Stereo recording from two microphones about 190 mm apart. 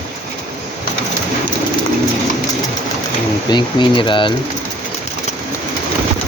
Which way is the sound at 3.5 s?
25° left (ahead or behind).